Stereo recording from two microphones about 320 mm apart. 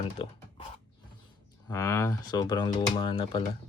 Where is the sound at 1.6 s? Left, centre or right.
Centre.